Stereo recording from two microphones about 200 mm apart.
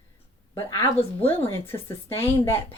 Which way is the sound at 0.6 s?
25° left (ahead or behind).